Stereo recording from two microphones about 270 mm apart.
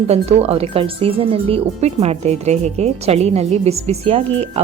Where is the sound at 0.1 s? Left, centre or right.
Right.